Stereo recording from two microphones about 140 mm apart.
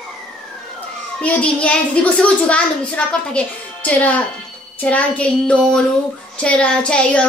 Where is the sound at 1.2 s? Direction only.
10° left (ahead or behind).